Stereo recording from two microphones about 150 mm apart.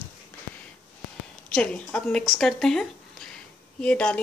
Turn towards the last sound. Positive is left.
turn(degrees=5)  # may be behind; listen again after turning